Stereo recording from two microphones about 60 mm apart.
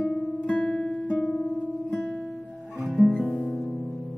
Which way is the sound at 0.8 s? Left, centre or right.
Centre.